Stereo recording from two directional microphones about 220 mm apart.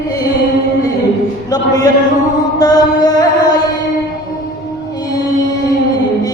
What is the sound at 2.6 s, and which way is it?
Music, 15° left (ahead or behind).